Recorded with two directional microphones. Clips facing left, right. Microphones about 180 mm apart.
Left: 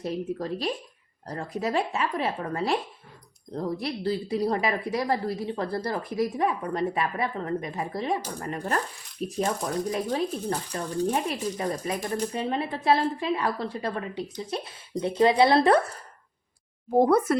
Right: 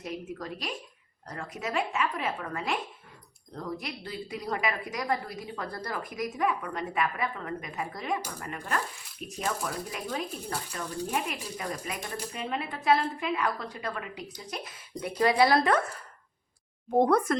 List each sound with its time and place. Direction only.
0.0 s speech: 30° left (ahead or behind)
16.9 s speech: 5° left (ahead or behind)